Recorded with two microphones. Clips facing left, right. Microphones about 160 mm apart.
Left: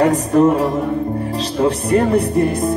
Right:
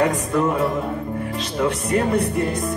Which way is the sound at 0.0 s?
35° left (ahead or behind).